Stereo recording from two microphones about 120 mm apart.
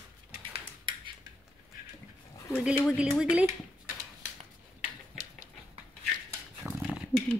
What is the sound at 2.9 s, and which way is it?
Speech, 10° right (ahead or behind).